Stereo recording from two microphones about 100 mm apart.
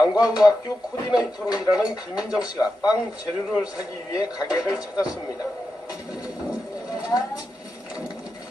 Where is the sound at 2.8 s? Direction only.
40° left (ahead or behind).